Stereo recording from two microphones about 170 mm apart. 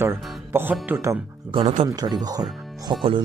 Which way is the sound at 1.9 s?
25° right (ahead or behind).